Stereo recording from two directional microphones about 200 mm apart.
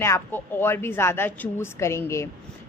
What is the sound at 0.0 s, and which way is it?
A woman's voice, 10° left (ahead or behind).